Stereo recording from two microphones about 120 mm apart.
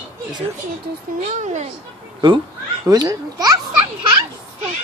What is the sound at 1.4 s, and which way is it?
Speech, 90° right.